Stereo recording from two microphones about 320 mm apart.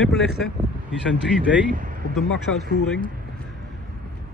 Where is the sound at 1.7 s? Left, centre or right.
Right.